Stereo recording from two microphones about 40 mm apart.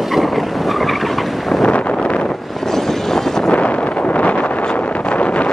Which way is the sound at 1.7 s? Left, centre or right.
Left.